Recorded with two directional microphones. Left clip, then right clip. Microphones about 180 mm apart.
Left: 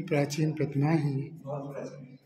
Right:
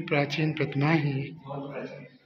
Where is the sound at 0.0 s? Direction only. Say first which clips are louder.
Right 2 dB; 25° left (ahead or behind).